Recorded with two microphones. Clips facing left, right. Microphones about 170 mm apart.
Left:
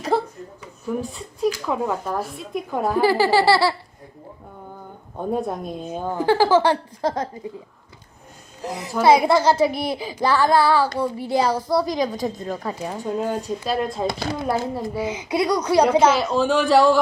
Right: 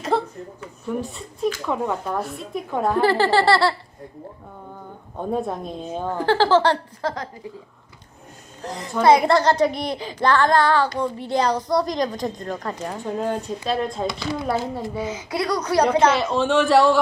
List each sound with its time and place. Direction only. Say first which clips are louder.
0.1 s a sound: left 1 dB; 5° left (ahead or behind)
0.9 s a woman's voice: left 1 dB; centre (ahead or behind)
5.2 s a woman's voice: left 1 dB; 5° left (ahead or behind); by 7.3 s 20° left (ahead or behind)
8.6 s a child's voice: even; 10° left (ahead or behind)
14.1 s speech: left 1 dB; 50° left (ahead or behind)
15.0 s a child's voice: left 5 dB; 15° left (ahead or behind)